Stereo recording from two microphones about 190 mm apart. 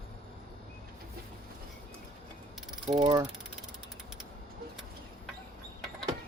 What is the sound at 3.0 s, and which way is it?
Speech, 20° right (ahead or behind).